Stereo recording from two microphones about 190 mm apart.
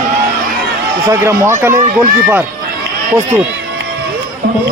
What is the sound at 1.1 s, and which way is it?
Speech, 15° right (ahead or behind).